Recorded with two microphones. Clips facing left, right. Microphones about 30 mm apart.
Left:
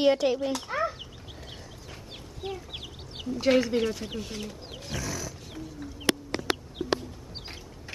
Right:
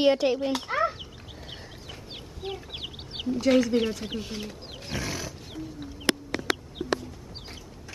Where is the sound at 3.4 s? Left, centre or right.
Centre.